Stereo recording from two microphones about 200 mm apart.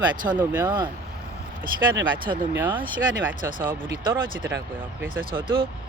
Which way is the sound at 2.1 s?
25° right (ahead or behind).